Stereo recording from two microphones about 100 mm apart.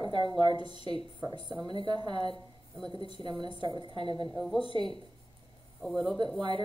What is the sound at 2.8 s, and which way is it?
Speech, 65° left (ahead or behind).